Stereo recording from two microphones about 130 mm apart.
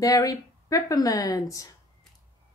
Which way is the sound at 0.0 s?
25° left (ahead or behind).